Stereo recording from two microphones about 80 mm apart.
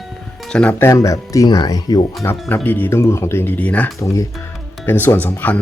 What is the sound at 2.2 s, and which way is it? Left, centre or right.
Speech, left.